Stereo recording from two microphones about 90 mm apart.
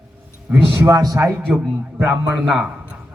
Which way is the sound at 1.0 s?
40° right (ahead or behind).